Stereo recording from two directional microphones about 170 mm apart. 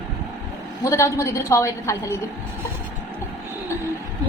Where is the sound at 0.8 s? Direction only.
15° left (ahead or behind).